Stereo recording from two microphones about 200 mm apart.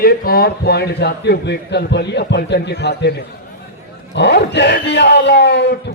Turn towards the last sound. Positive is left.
turn(degrees=60)  # may be behind; listen again after turning